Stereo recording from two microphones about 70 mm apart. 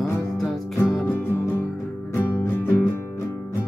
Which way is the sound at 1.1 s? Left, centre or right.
Left.